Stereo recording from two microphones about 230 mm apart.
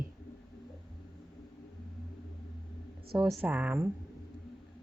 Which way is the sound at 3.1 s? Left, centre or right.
Centre.